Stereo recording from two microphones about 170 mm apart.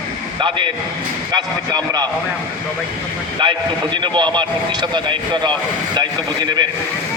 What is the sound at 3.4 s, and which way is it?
A man's voice, 25° right (ahead or behind).